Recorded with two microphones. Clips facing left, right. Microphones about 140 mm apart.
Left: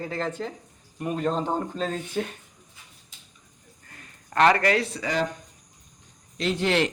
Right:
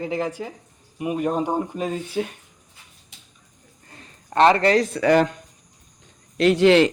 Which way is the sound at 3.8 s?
25° right (ahead or behind).